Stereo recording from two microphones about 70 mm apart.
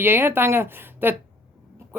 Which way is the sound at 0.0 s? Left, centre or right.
Right.